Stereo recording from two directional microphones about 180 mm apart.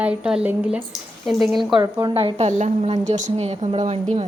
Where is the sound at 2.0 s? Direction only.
30° right (ahead or behind).